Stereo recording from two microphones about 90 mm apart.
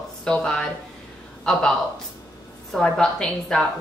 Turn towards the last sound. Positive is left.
turn(degrees=5)  # may be behind; listen again after turning